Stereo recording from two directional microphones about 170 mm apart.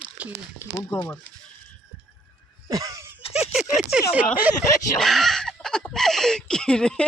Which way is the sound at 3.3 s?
Centre (ahead or behind).